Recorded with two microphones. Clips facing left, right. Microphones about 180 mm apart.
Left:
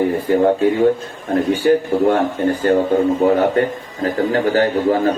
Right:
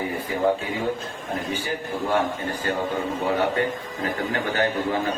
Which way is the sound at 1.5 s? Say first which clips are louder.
Left 14 dB; 65° left (ahead or behind).